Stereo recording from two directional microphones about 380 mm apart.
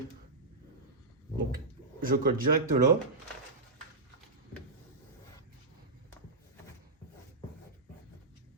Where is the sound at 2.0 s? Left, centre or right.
Right.